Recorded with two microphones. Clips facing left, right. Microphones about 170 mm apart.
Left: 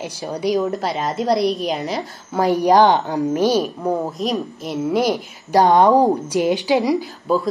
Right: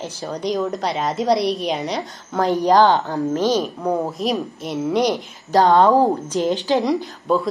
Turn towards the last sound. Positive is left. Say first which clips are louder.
# left 1 dB
turn(degrees=0)  # may be behind; listen again after turning